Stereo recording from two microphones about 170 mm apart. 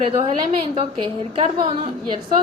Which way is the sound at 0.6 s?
35° right (ahead or behind).